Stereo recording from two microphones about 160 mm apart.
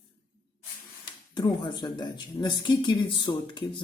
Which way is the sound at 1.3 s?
30° left (ahead or behind).